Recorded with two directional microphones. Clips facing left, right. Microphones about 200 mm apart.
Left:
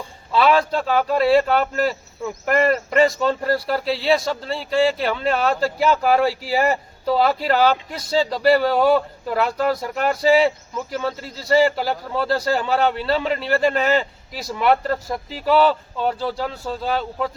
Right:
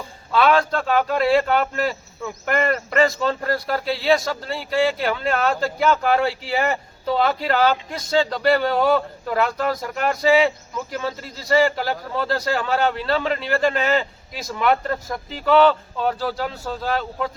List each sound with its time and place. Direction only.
0.3 s speech: centre (ahead or behind)
3.0 s speech: 5° left (ahead or behind)
6.5 s speech: 35° left (ahead or behind)
7.2 s speech: 5° left (ahead or behind)